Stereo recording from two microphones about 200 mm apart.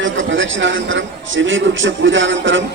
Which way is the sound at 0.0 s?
70° right (ahead or behind).